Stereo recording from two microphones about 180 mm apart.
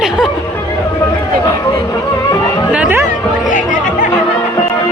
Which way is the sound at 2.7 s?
10° right (ahead or behind).